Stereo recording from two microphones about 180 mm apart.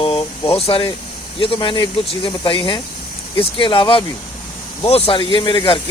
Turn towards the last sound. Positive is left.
turn(degrees=30)  # may be behind; listen again after turning